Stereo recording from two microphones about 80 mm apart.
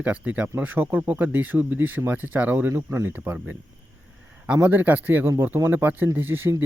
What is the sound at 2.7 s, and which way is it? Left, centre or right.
Speech, right.